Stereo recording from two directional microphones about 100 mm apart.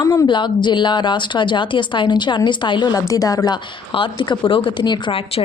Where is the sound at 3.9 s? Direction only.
55° left (ahead or behind).